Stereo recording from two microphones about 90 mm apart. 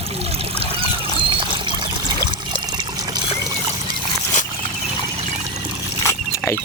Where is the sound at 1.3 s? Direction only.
60° right (ahead or behind).